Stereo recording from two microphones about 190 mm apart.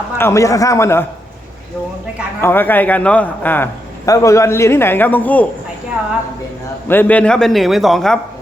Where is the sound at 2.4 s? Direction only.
10° left (ahead or behind).